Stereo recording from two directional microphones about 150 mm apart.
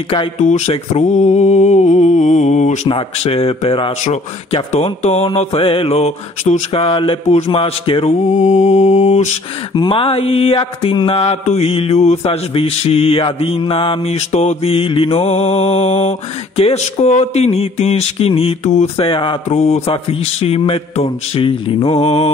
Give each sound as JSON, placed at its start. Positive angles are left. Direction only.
{"t": 0.4, "sound": "mantra", "side_deg": 50}
{"t": 2.9, "sound": "mantra", "side_deg": 40}
{"t": 4.0, "sound": "mantra", "side_deg": 45}
{"t": 8.4, "sound": "mantra", "side_deg": 50}
{"t": 9.8, "sound": "mantra", "side_deg": 35}